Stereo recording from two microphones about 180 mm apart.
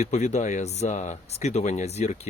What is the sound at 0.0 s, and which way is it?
Speech, 40° left (ahead or behind).